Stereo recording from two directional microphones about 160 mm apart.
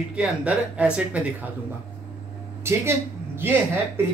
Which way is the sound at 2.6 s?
15° right (ahead or behind).